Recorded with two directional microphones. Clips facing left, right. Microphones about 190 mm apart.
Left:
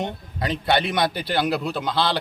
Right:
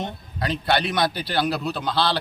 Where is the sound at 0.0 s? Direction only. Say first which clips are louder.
Left 1 dB; 20° left (ahead or behind).